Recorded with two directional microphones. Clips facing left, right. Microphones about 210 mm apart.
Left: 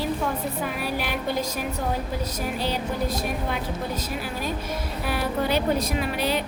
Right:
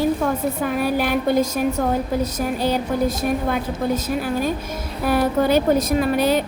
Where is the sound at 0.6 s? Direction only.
50° right (ahead or behind).